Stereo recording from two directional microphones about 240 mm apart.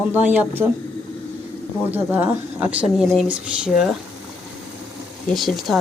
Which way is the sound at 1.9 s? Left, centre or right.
Centre.